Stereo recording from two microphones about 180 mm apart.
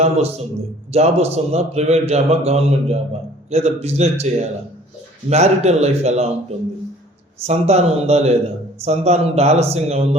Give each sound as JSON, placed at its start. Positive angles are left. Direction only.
{"t": 0.0, "sound": "a man's voice", "side_deg": -35}
{"t": 7.4, "sound": "a man's voice", "side_deg": -35}